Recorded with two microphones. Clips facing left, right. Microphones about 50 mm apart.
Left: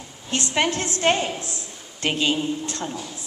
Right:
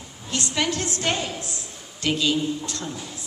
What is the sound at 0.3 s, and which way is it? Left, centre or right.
A woman's voice, left.